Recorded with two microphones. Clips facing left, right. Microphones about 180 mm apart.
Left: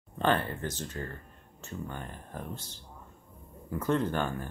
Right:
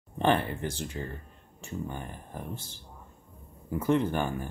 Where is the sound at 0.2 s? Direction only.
15° right (ahead or behind).